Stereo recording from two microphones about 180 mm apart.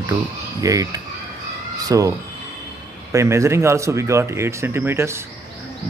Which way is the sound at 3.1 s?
15° right (ahead or behind).